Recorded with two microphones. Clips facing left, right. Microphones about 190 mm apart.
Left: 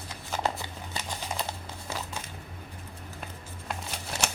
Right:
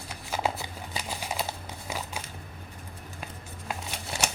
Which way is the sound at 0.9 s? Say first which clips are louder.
Right 1 dB; 10° right (ahead or behind).